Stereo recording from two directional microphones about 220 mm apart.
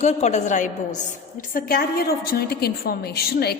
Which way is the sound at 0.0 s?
30° left (ahead or behind).